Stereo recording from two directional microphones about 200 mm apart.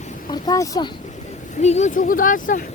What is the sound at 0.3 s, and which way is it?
Speech, 20° left (ahead or behind).